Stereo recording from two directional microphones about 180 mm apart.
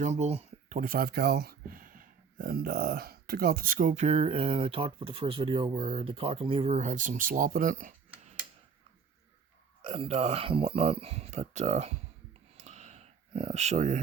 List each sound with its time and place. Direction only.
0.0 s speech: 40° right (ahead or behind)
9.8 s speech: 35° right (ahead or behind)
12.5 s a sound: 35° right (ahead or behind)